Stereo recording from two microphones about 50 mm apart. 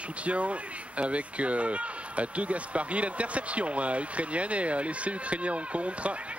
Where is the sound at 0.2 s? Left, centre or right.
Right.